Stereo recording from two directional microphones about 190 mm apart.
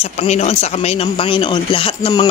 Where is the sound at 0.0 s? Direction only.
35° left (ahead or behind).